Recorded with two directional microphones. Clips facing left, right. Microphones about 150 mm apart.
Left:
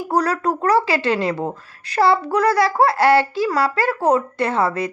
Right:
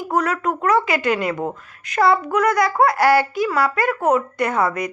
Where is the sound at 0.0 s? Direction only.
35° left (ahead or behind).